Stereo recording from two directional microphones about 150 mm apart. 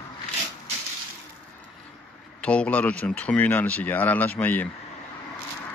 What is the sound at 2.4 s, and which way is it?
Speech, 10° left (ahead or behind).